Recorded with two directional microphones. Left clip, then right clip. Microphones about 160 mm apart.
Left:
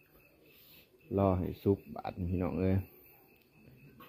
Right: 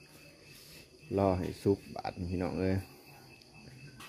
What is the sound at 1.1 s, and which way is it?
Speech, 25° right (ahead or behind).